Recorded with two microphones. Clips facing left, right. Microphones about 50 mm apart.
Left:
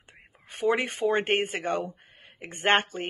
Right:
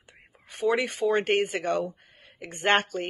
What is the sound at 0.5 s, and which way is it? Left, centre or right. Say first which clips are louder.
Speech: even; left.